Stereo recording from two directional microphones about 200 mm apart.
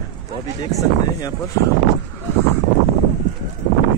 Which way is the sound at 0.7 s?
15° left (ahead or behind).